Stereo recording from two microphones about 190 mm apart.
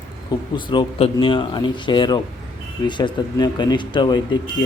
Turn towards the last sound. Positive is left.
turn(degrees=25)  # may be behind; listen again after turning